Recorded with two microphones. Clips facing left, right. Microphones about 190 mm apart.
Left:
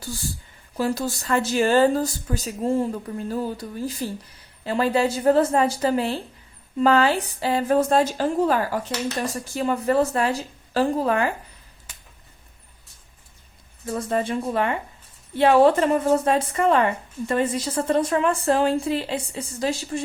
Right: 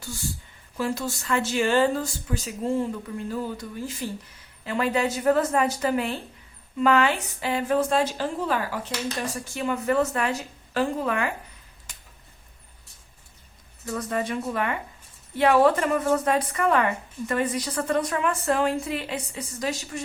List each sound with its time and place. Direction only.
0.8 s a woman's voice: 35° left (ahead or behind)
13.8 s a woman's voice: 25° left (ahead or behind)